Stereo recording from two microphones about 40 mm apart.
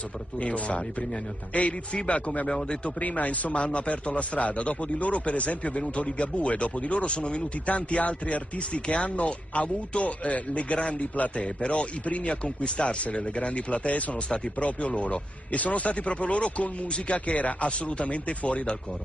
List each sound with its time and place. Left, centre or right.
0.4 s speech: left
2.4 s speech: left
3.0 s speech: left